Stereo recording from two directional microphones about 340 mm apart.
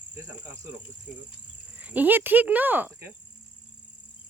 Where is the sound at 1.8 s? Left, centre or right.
Centre.